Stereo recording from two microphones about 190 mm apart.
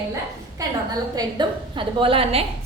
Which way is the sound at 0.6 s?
20° right (ahead or behind).